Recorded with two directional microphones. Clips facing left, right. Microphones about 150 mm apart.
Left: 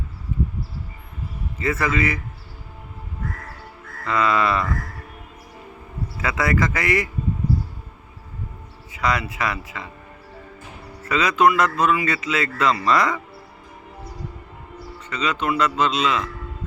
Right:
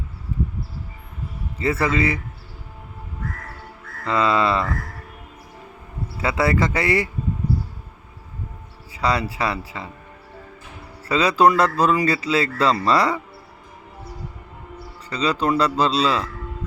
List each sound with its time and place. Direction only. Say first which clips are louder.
0.3 s a sound: left 1 dB; 35° right (ahead or behind)
1.5 s speech: right 2 dB; 30° right (ahead or behind)
4.0 s speech: right 1 dB; 30° right (ahead or behind)
6.1 s speech: right 2 dB; 30° right (ahead or behind)
8.9 s speech: right 1 dB; 30° right (ahead or behind)
11.0 s speech: right 2 dB; 30° right (ahead or behind)
15.1 s speech: right 3 dB; 35° right (ahead or behind)